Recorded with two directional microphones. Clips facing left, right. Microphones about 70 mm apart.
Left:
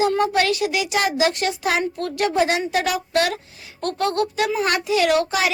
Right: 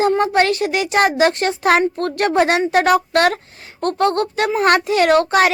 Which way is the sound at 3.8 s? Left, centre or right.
Right.